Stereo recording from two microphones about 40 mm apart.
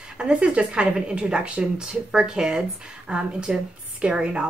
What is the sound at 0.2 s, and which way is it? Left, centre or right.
Speech, right.